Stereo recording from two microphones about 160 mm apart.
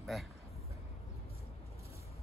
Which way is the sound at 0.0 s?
Centre (ahead or behind).